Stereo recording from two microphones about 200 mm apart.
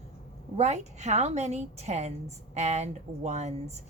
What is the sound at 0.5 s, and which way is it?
A woman's voice, 35° right (ahead or behind).